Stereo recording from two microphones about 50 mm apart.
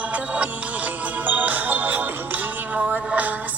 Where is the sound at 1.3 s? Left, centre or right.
Right.